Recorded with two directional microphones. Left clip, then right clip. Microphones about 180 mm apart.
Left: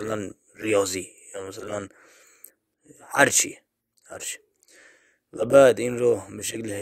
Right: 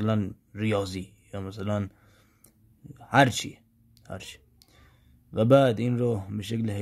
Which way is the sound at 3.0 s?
30° left (ahead or behind).